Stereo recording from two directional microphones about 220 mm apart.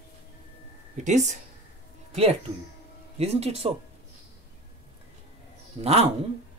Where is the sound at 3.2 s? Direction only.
30° right (ahead or behind).